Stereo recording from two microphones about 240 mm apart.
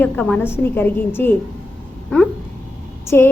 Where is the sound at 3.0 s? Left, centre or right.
Centre.